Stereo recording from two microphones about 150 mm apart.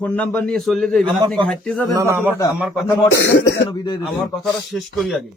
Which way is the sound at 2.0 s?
15° right (ahead or behind).